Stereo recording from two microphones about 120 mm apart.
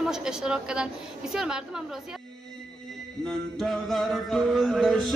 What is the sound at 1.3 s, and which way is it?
Music, 5° right (ahead or behind).